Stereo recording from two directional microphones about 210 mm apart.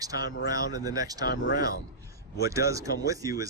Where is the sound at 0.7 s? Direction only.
15° right (ahead or behind).